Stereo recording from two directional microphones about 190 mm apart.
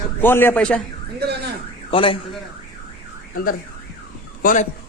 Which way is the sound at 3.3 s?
50° left (ahead or behind).